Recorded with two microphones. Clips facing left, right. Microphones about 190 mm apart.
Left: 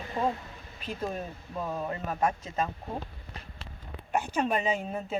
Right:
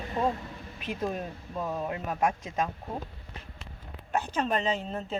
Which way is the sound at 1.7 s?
10° right (ahead or behind).